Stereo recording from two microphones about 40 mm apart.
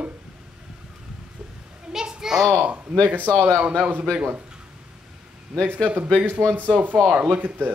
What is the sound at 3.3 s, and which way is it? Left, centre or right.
Speech, left.